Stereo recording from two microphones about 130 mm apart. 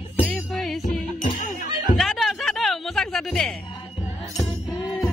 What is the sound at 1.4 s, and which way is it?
Chatter, 90° left.